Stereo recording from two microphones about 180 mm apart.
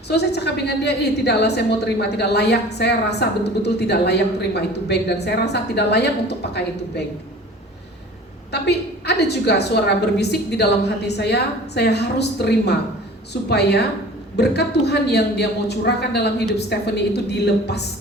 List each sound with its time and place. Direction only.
0.1 s a woman's voice: 70° left (ahead or behind)
8.5 s a woman's voice: 65° left (ahead or behind)